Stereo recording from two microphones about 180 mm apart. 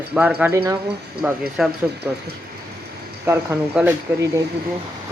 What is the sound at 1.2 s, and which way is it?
Speech, 5° right (ahead or behind).